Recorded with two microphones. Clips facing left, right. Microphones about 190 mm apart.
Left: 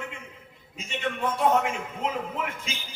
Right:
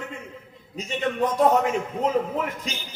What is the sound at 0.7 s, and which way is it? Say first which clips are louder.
A man's voice: right 5 dB; 40° right (ahead or behind).